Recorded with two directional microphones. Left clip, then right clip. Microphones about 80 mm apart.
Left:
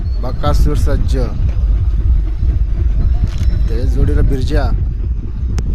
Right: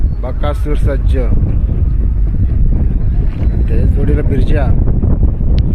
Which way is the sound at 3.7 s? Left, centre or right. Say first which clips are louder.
Right 2 dB; left.